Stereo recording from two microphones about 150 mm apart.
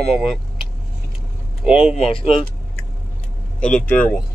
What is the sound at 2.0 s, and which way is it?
Speech, 40° left (ahead or behind).